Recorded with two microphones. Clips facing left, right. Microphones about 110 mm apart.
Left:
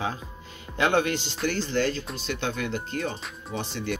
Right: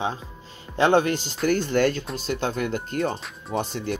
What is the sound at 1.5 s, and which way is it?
Speech, 55° right (ahead or behind).